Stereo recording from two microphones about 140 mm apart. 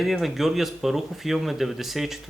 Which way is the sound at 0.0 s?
Centre (ahead or behind).